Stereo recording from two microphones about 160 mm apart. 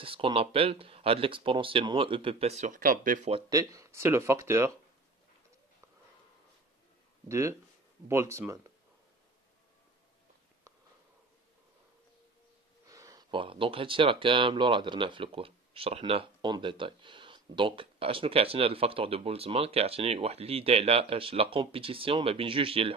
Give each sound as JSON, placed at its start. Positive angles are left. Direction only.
{"t": 0.0, "sound": "speech", "side_deg": -35}
{"t": 3.4, "sound": "speech", "side_deg": -20}
{"t": 7.2, "sound": "speech", "side_deg": -20}
{"t": 12.8, "sound": "a sound", "side_deg": -20}
{"t": 13.4, "sound": "speech", "side_deg": -35}